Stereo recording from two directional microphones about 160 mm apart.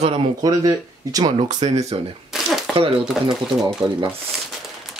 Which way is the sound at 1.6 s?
45° right (ahead or behind).